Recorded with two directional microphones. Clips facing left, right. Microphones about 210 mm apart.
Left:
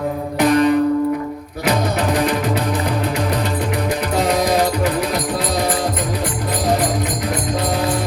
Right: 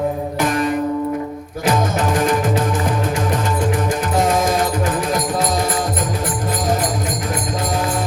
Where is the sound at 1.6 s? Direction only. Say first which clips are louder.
Even; 50° right (ahead or behind).